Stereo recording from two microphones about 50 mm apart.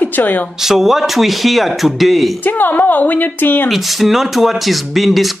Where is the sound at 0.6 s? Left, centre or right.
Centre.